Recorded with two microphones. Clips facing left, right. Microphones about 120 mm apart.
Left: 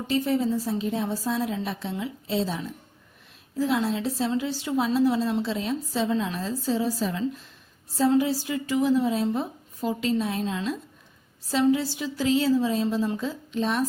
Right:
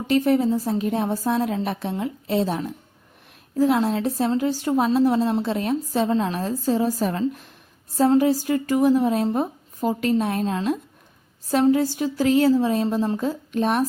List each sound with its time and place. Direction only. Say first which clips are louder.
0.1 s a woman's voice: right 5 dB; 60° right (ahead or behind)